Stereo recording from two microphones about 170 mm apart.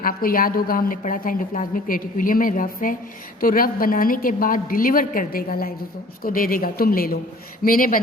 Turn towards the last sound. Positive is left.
turn(degrees=55)  # may be behind; listen again after turning